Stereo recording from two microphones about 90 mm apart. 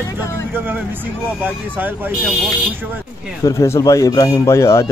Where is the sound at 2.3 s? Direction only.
Centre (ahead or behind).